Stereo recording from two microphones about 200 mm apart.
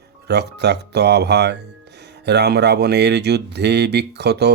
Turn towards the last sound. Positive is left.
turn(degrees=-55)  # may be behind; listen again after turning